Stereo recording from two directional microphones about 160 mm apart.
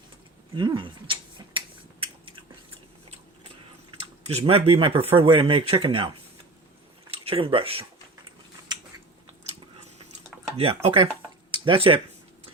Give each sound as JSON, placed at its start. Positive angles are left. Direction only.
{"t": 0.5, "sound": "a sound", "side_deg": -30}
{"t": 4.0, "sound": "speech", "side_deg": -40}
{"t": 10.8, "sound": "speech", "side_deg": -30}